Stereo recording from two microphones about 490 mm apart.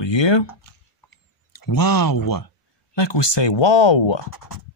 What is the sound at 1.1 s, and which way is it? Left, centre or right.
Speech, left.